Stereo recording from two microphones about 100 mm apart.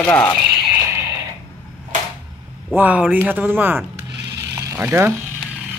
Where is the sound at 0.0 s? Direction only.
20° left (ahead or behind).